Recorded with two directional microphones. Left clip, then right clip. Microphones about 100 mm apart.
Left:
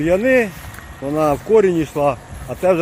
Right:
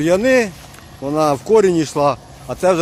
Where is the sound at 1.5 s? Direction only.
30° right (ahead or behind).